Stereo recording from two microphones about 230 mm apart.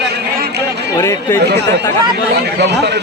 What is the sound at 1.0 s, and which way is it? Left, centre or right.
Speech, centre.